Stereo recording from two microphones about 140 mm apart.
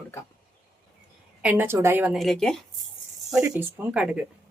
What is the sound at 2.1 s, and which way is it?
Speech, centre (ahead or behind).